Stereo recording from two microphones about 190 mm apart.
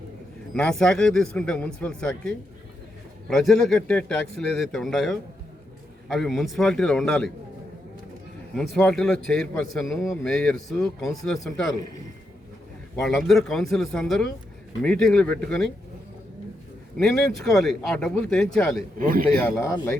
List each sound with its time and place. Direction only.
0.5 s speech: 5° left (ahead or behind)
8.5 s speech: centre (ahead or behind)
13.0 s speech: centre (ahead or behind)
17.0 s speech: centre (ahead or behind)
18.9 s speech: 50° right (ahead or behind)
19.5 s speech: 15° left (ahead or behind)